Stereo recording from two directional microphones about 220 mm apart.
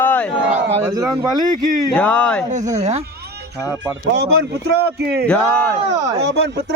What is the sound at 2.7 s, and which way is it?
Speech, 30° right (ahead or behind).